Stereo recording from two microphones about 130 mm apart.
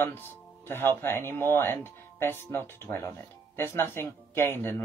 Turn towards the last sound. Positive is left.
turn(degrees=20)  # may be behind; listen again after turning